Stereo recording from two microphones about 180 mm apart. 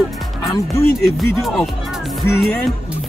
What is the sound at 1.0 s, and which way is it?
Speech, centre (ahead or behind).